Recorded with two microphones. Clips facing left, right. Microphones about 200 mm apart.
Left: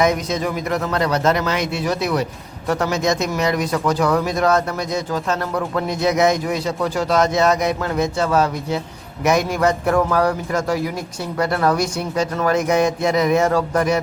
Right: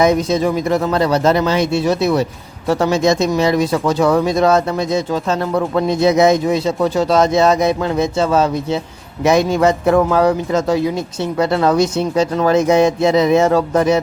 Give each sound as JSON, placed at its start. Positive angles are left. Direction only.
{"t": 0.0, "sound": "speech", "side_deg": -30}